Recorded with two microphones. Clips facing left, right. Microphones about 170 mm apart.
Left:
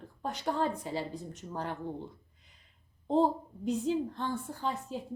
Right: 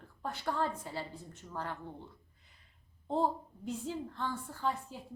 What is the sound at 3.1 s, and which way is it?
A woman's voice, 20° left (ahead or behind).